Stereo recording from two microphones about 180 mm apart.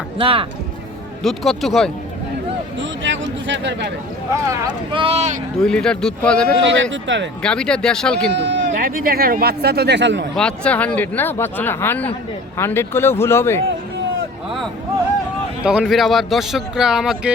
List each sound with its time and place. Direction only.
0.2 s speech: 30° right (ahead or behind)
1.2 s speech: centre (ahead or behind)
2.7 s speech: 90° right
4.3 s speech: 20° right (ahead or behind)
5.5 s speech: 5° left (ahead or behind)
6.9 s speech: 90° right
7.4 s speech: 5° left (ahead or behind)
8.3 s speech: 75° right (ahead or behind)
8.8 s speech: 55° right (ahead or behind); by 10.2 s 80° right
10.3 s speech: 5° left (ahead or behind)
15.6 s speech: 5° right (ahead or behind)